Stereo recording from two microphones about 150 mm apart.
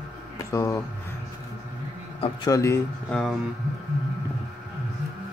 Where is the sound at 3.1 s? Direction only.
5° left (ahead or behind).